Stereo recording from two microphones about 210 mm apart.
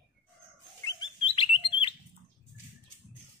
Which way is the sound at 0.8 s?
25° left (ahead or behind).